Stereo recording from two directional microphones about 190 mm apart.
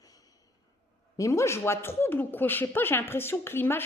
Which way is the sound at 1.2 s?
15° left (ahead or behind).